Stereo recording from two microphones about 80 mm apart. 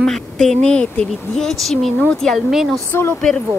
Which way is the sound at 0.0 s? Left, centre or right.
Centre.